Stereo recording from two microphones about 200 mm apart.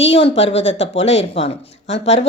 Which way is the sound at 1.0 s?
30° left (ahead or behind).